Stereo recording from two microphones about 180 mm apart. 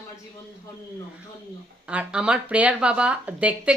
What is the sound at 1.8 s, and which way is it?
Speech, 5° right (ahead or behind).